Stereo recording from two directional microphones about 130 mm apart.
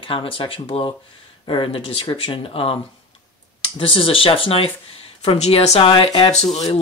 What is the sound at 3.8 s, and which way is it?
Speech, 45° left (ahead or behind).